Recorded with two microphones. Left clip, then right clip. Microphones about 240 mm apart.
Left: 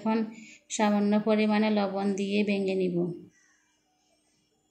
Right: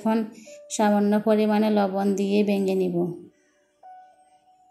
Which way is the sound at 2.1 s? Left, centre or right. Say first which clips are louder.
Right 6 dB; right.